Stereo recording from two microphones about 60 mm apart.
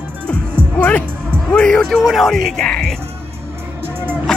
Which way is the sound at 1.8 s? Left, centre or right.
Centre.